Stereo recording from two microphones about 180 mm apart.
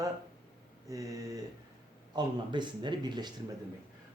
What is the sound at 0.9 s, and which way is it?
Speech, 20° right (ahead or behind).